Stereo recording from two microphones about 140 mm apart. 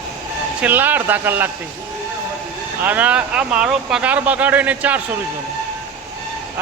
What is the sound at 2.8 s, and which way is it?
Speech, 10° right (ahead or behind).